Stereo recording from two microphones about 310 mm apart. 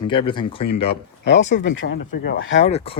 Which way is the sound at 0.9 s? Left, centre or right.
Left.